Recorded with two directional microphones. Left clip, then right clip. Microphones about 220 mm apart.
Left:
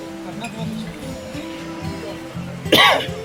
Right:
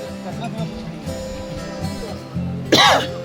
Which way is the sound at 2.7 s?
15° right (ahead or behind).